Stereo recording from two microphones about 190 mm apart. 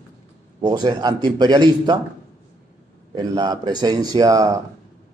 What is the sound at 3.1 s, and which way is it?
A man's voice, 20° right (ahead or behind).